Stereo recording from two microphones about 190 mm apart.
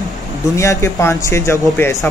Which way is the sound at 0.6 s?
15° left (ahead or behind).